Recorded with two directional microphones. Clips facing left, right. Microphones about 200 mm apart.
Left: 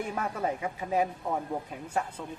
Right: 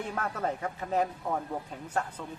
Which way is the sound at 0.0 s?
10° left (ahead or behind).